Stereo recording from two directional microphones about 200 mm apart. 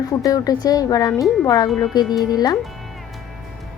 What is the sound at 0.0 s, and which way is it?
Speech, 15° left (ahead or behind).